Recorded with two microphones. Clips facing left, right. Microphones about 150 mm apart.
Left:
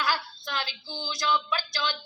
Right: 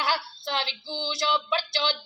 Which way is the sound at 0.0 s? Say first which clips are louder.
Right 1 dB; 25° right (ahead or behind).